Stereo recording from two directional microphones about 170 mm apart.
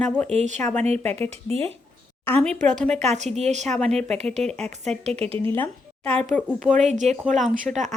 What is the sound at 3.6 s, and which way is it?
Speech, 5° left (ahead or behind).